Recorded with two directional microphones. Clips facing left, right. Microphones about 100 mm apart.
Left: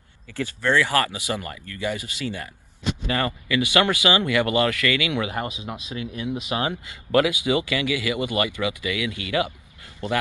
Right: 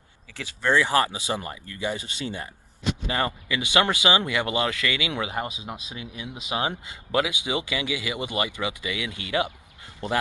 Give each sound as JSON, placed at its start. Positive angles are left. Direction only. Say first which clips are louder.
{"t": 0.6, "sound": "speech", "louder": "even", "side_deg": -20}